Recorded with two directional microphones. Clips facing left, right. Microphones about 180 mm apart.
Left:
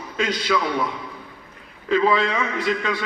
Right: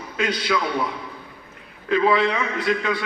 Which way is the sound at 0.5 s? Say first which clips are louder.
Left 2 dB; 5° right (ahead or behind).